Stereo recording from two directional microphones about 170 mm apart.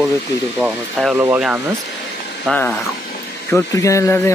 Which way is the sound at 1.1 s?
15° right (ahead or behind).